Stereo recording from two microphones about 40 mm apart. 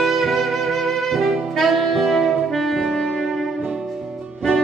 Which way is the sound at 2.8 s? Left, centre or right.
Centre.